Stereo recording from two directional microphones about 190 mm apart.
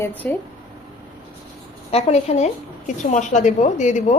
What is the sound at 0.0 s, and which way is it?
Speech, 10° left (ahead or behind).